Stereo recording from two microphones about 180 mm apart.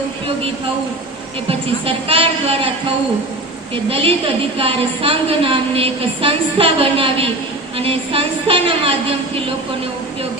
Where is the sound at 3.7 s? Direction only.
30° right (ahead or behind).